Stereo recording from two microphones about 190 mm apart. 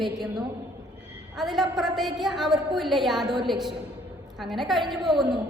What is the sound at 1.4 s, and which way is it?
A woman's voice, centre (ahead or behind).